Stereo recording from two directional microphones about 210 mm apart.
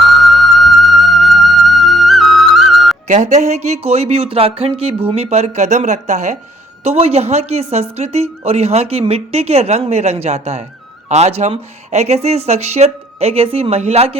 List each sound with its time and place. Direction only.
0.0 s music: centre (ahead or behind)
3.1 s a woman's voice: 35° right (ahead or behind)